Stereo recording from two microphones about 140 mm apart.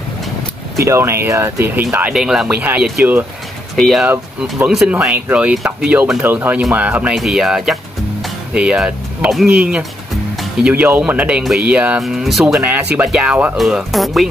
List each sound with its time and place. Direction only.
0.8 s speech: 20° right (ahead or behind)
2.1 s speech: 5° right (ahead or behind)
4.1 s speech: 10° right (ahead or behind)
10.3 s music: centre (ahead or behind)
10.7 s speech: 10° right (ahead or behind)